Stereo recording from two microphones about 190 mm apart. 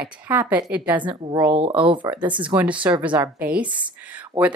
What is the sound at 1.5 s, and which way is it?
Speech, 25° right (ahead or behind).